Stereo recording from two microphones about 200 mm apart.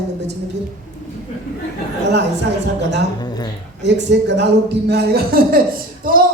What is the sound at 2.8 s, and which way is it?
Speech, 60° right (ahead or behind).